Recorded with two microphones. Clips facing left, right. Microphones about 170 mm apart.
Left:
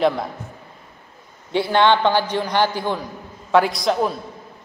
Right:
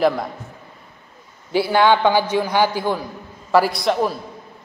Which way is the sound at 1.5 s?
5° right (ahead or behind).